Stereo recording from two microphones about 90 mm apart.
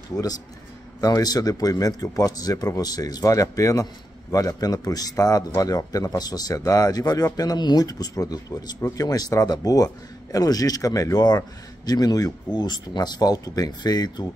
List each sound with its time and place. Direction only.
0.1 s speech: 40° left (ahead or behind)